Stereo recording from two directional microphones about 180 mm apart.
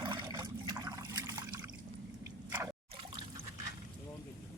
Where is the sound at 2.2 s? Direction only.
15° right (ahead or behind).